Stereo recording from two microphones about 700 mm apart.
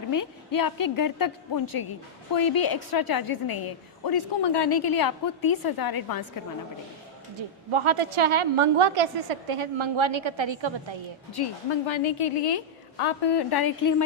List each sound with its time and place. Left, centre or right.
0.1 s a woman's voice: left
7.3 s a woman's voice: right
11.3 s a woman's voice: left